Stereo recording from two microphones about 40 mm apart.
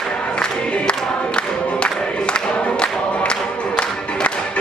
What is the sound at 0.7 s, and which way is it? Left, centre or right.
Choir, left.